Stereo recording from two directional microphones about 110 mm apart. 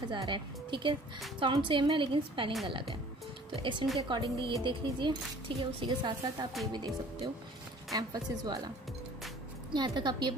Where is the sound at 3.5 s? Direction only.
50° right (ahead or behind).